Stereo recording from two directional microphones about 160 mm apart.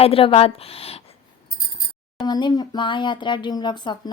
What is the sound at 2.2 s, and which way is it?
Speech, 25° left (ahead or behind).